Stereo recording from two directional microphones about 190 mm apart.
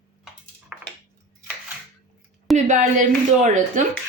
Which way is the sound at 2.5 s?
40° right (ahead or behind).